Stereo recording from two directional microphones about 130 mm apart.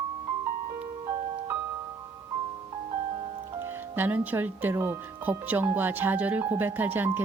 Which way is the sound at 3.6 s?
15° right (ahead or behind).